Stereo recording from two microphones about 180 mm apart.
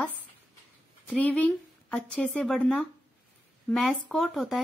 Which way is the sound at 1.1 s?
5° left (ahead or behind).